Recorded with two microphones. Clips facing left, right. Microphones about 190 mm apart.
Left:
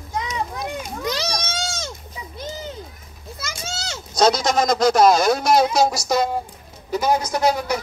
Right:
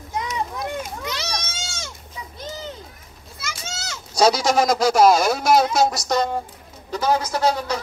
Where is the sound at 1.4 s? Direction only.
35° left (ahead or behind).